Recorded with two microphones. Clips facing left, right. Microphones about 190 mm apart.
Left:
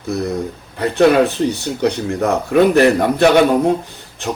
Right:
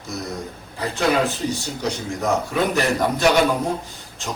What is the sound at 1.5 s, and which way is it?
A man's voice, 60° left (ahead or behind).